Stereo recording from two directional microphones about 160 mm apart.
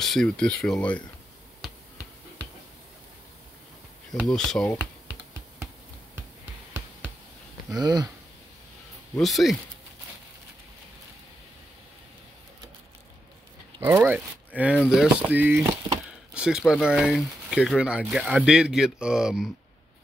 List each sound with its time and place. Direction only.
0.0 s speech: 5° left (ahead or behind)
4.2 s speech: centre (ahead or behind)
7.8 s speech: 25° right (ahead or behind)
9.2 s speech: centre (ahead or behind)
13.7 s speech: 15° right (ahead or behind)